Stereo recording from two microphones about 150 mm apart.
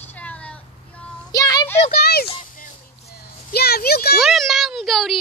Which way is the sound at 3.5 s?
90° left.